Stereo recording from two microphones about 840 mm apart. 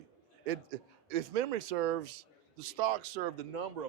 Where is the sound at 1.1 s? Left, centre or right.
Right.